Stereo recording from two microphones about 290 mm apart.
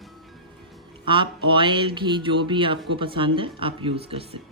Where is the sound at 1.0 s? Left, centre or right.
Centre.